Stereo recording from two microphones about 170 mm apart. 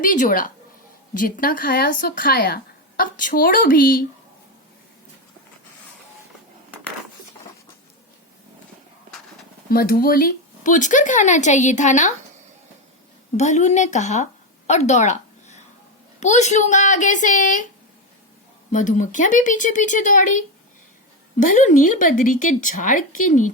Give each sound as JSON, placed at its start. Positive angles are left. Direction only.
{"t": 0.0, "sound": "a woman's voice", "side_deg": 50}
{"t": 9.6, "sound": "speech", "side_deg": 60}
{"t": 13.3, "sound": "speech", "side_deg": 45}
{"t": 14.7, "sound": "a sound", "side_deg": 40}
{"t": 16.2, "sound": "speech", "side_deg": 45}
{"t": 18.7, "sound": "speech", "side_deg": 45}